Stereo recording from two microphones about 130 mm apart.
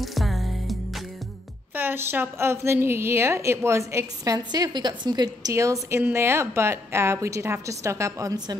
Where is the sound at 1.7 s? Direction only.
15° right (ahead or behind).